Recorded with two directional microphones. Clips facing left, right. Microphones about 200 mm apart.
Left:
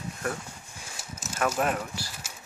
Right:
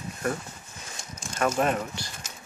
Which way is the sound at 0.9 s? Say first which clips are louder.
Even; 5° left (ahead or behind).